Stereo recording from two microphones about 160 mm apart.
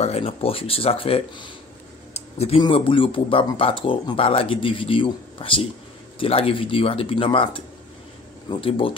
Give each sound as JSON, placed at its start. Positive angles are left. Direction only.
{"t": 0.0, "sound": "speech", "side_deg": 40}
{"t": 2.1, "sound": "a sound", "side_deg": 40}
{"t": 2.6, "sound": "speech", "side_deg": 35}